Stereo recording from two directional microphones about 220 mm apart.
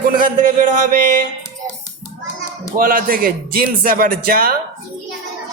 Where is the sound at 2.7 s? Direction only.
40° right (ahead or behind).